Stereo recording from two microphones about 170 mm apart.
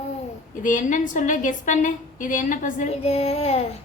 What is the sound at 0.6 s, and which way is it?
A woman's voice, 50° left (ahead or behind).